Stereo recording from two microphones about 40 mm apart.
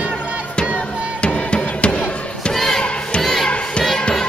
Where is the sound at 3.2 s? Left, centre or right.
Centre.